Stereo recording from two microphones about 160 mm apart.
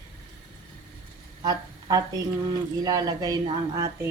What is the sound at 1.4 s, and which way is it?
Speech, 25° right (ahead or behind).